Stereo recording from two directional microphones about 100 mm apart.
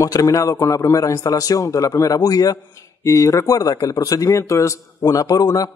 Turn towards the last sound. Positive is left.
turn(degrees=35)  # may be behind; listen again after turning